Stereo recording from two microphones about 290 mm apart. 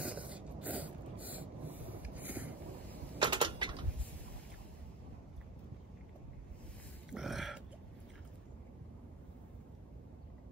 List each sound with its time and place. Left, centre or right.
0.0 s a sound: centre
3.2 s typewriter: centre
7.1 s burping: centre